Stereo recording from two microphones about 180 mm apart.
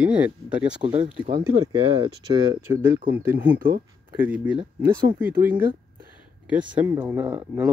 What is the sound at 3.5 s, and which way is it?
Speech, 55° right (ahead or behind).